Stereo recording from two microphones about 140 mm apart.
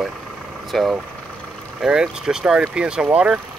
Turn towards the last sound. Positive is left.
turn(degrees=-5)  # may be behind; listen again after turning